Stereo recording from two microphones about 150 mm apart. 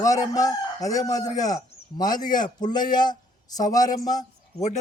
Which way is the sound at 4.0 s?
25° left (ahead or behind).